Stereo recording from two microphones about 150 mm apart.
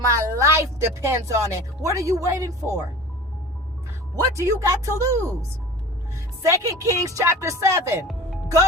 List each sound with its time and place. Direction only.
0.1 s speech: 20° right (ahead or behind)
4.1 s speech: 20° right (ahead or behind)
6.5 s speech: 20° right (ahead or behind)